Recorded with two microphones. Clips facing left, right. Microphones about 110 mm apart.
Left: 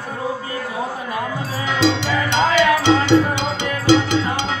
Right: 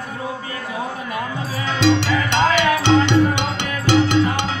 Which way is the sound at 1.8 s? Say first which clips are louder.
Right 2 dB; 60° right (ahead or behind).